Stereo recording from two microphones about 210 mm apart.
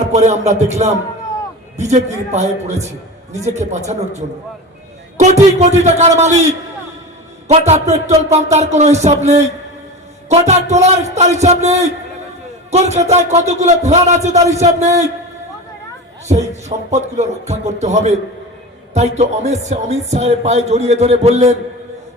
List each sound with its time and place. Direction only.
0.1 s a man's voice: 35° right (ahead or behind)
16.3 s a man's voice: 35° right (ahead or behind)